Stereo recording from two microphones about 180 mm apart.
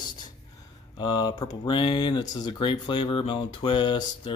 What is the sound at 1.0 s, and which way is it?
Speech, 25° left (ahead or behind).